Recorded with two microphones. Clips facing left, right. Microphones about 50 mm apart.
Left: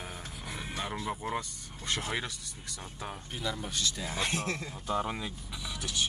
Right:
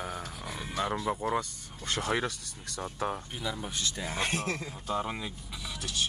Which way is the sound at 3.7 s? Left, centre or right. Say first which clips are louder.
Even; right.